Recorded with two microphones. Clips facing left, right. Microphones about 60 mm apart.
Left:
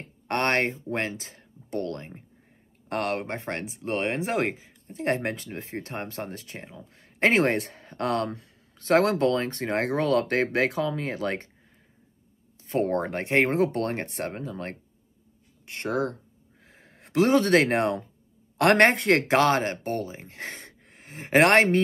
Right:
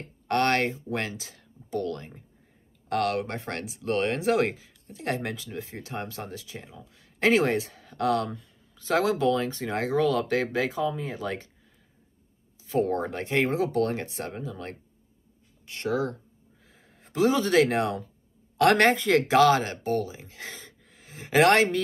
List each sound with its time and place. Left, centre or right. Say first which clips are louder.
0.3 s speech: right 1 dB; left
12.6 s speech: even; left
16.6 s speech: left 4 dB; left